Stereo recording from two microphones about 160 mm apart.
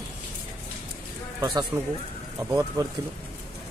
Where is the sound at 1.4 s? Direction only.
25° right (ahead or behind).